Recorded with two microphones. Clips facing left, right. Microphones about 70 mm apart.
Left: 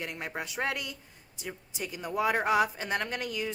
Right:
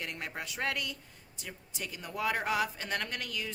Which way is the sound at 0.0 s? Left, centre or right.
Centre.